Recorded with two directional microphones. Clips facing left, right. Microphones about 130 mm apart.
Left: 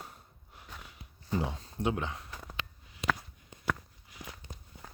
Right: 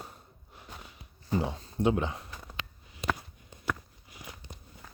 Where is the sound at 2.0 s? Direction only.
5° right (ahead or behind).